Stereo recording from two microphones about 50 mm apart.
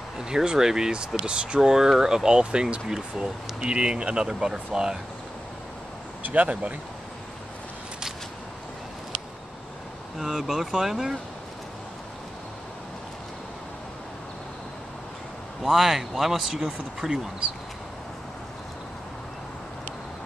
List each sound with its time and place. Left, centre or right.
0.2 s speech: centre
6.2 s speech: right
10.1 s speech: centre
15.6 s speech: centre